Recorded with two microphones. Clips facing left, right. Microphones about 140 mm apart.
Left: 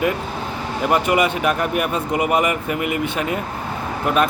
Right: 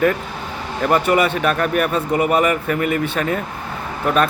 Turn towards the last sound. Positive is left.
turn(degrees=10)  # may be behind; listen again after turning